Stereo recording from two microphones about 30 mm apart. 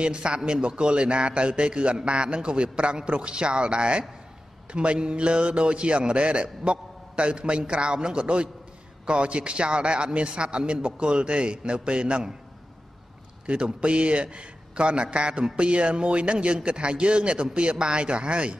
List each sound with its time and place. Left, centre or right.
0.0 s a man's voice: right
13.7 s a man's voice: right